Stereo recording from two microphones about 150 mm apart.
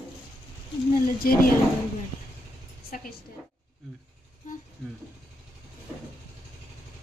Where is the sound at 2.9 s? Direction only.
70° left (ahead or behind).